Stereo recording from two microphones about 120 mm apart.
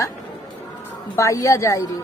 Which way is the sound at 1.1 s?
25° left (ahead or behind).